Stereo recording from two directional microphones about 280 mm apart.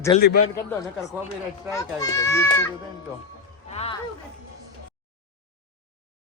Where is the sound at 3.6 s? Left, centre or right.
Left.